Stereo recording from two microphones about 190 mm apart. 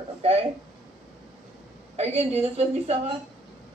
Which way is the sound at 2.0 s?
35° right (ahead or behind).